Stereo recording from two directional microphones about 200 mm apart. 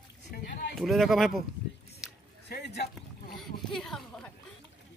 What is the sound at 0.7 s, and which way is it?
Speech, centre (ahead or behind).